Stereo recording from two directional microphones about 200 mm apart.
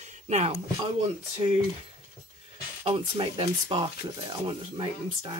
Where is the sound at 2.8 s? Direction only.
30° right (ahead or behind).